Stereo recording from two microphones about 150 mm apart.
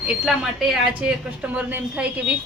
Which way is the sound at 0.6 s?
Centre (ahead or behind).